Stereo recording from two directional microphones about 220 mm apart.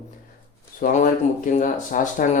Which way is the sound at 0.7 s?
40° left (ahead or behind).